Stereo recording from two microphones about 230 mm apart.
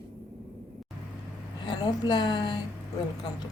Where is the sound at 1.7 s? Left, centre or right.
Centre.